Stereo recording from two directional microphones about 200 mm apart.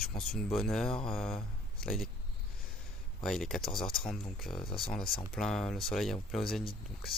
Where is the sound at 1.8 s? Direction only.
Centre (ahead or behind).